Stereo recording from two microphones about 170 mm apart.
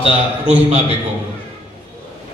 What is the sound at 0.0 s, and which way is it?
Speech, 40° right (ahead or behind).